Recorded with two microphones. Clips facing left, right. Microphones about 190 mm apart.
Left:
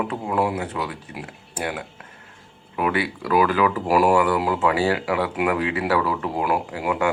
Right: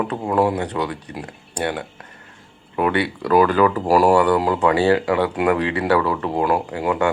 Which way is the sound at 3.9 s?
40° right (ahead or behind).